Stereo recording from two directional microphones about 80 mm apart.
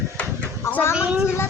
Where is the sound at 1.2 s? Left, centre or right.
Left.